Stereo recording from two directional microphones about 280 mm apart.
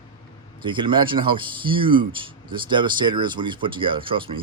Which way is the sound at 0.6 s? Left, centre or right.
Centre.